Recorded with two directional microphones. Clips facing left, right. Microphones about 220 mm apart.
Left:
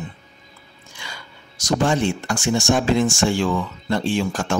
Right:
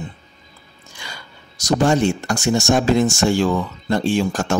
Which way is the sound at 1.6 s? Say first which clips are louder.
Right 3 dB; 40° right (ahead or behind).